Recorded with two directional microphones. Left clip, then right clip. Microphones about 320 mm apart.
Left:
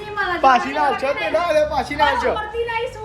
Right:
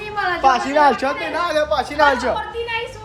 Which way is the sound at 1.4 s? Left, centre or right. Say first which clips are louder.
Even; centre.